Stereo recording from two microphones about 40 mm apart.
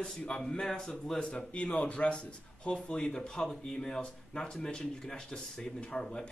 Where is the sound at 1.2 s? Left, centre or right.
Left.